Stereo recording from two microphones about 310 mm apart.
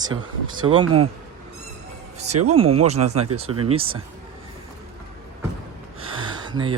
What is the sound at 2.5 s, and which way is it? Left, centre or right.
Speech, centre.